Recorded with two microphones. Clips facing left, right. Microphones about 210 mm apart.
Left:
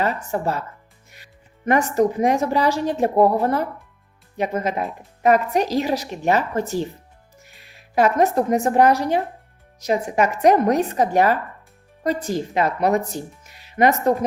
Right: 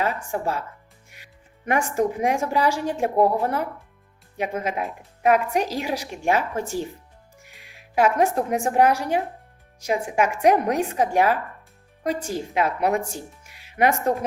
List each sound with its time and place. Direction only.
0.3 s a woman's voice: 10° right (ahead or behind)
7.4 s music: 15° right (ahead or behind)
8.8 s a woman's voice: 10° right (ahead or behind)
13.0 s speech: 35° left (ahead or behind)
13.4 s music: 10° right (ahead or behind)